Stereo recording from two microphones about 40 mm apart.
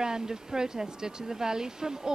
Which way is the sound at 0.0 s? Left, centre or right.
Centre.